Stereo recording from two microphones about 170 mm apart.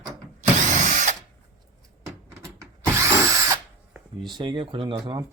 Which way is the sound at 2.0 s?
15° right (ahead or behind).